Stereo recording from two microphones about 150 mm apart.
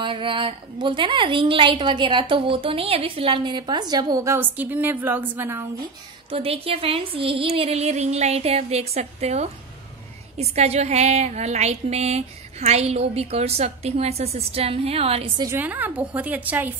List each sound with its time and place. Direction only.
0.0 s a woman's voice: 35° right (ahead or behind); by 5.7 s 15° right (ahead or behind)
6.3 s a woman's voice: 40° right (ahead or behind)
15.5 s a woman's voice: 10° right (ahead or behind)